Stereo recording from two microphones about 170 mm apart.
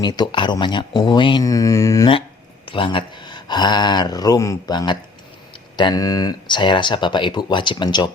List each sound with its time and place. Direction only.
0.0 s speech: 25° left (ahead or behind)
2.6 s speech: 30° left (ahead or behind)